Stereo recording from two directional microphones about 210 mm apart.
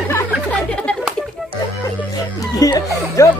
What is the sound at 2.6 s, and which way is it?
Music, 15° left (ahead or behind).